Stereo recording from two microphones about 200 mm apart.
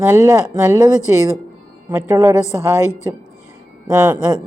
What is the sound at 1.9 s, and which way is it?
Speech, 15° right (ahead or behind).